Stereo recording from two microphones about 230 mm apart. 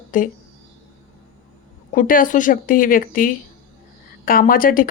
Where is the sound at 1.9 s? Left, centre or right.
Left.